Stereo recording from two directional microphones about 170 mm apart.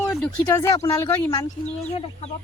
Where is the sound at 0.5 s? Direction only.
20° left (ahead or behind).